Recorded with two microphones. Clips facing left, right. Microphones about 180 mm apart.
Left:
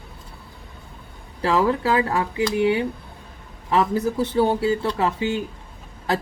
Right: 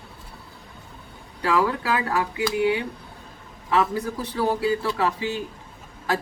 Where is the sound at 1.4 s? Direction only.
30° left (ahead or behind).